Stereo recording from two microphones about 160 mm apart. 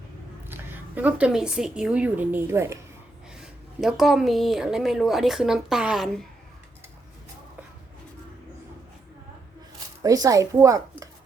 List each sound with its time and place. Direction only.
0.4 s a woman's voice: 15° right (ahead or behind)
3.3 s a woman's voice: 5° right (ahead or behind)
10.0 s a woman's voice: 20° right (ahead or behind)